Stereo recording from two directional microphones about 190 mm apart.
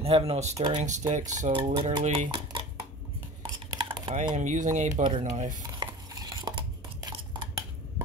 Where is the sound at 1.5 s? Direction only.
25° right (ahead or behind).